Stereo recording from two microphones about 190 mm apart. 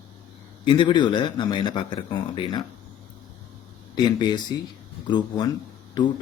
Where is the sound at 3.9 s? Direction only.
20° left (ahead or behind).